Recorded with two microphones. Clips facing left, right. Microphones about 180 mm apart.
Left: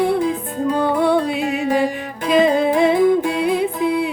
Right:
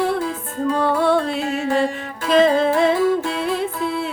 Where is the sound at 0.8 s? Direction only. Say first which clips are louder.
Left 1 dB; 5° left (ahead or behind).